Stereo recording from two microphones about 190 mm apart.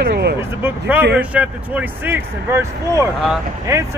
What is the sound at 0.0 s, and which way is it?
Vehicle, 60° right (ahead or behind).